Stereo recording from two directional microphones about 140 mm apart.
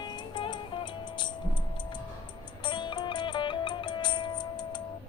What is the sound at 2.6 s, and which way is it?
Music, 35° left (ahead or behind).